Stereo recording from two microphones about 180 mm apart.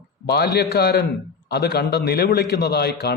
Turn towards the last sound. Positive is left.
turn(degrees=65)  # may be behind; listen again after turning